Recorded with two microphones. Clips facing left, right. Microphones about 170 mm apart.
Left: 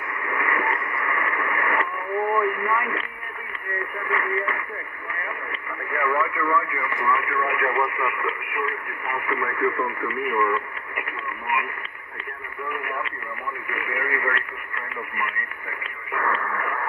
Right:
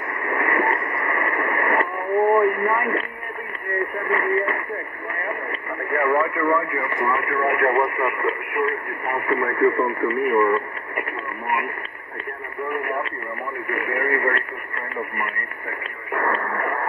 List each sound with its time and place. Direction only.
0.2 s radio: 40° right (ahead or behind)
5.2 s speech: 40° right (ahead or behind)
12.6 s radio: 35° right (ahead or behind)
16.1 s radio: 40° right (ahead or behind)